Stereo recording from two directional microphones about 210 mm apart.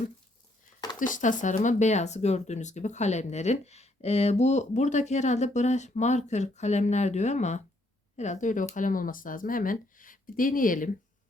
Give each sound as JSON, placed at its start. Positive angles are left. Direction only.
{"t": 0.9, "sound": "speech", "side_deg": 40}